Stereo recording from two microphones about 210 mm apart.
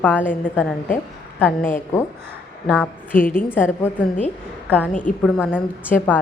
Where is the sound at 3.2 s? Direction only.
40° left (ahead or behind).